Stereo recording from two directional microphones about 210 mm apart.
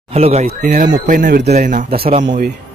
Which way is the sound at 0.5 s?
40° right (ahead or behind).